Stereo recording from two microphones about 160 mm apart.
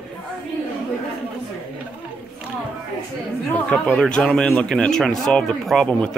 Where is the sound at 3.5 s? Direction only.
10° left (ahead or behind).